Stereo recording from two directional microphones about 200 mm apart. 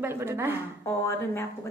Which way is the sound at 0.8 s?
15° left (ahead or behind).